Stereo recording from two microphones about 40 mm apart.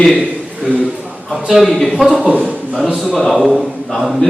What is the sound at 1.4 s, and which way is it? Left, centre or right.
Speech, centre.